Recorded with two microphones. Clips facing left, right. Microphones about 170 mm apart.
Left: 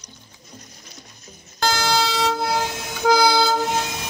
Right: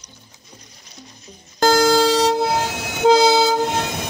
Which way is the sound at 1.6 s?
45° right (ahead or behind).